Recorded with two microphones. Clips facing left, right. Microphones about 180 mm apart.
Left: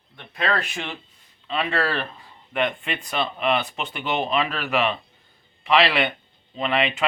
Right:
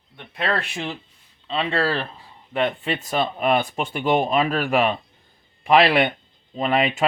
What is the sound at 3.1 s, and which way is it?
Speech, 45° right (ahead or behind).